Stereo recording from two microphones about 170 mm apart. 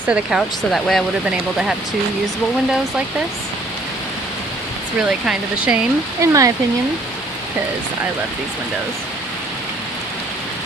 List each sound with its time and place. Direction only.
0.1 s speech: 5° right (ahead or behind)
4.9 s speech: 5° right (ahead or behind)
6.2 s speech: 20° right (ahead or behind)